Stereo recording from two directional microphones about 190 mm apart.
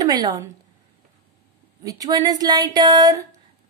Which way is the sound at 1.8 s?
20° right (ahead or behind).